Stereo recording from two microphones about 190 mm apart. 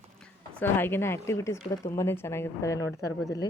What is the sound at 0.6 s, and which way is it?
A woman's voice, 10° left (ahead or behind).